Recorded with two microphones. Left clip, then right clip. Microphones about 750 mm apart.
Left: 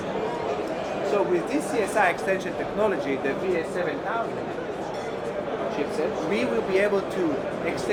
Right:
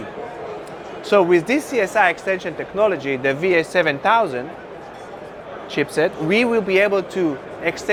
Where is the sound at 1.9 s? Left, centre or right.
Right.